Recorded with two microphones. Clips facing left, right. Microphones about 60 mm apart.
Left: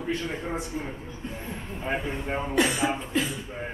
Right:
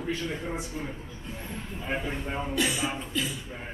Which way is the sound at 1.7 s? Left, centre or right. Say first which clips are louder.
Left 2 dB; left.